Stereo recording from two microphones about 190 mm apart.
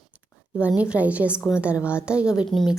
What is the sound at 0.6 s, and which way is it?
A woman's voice, 5° right (ahead or behind).